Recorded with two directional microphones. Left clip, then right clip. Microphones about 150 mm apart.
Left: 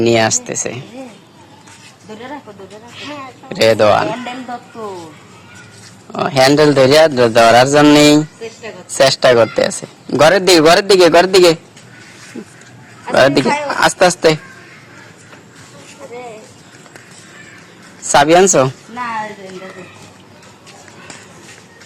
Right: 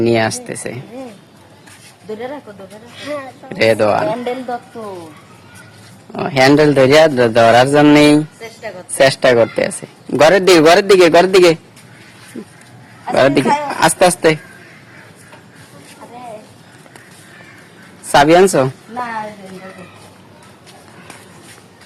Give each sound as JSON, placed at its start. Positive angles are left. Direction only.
{"t": 0.0, "sound": "a man's voice", "side_deg": 0}
{"t": 3.5, "sound": "a man's voice", "side_deg": 0}
{"t": 6.1, "sound": "a man's voice", "side_deg": -5}
{"t": 13.1, "sound": "a man's voice", "side_deg": -10}
{"t": 18.1, "sound": "a man's voice", "side_deg": -5}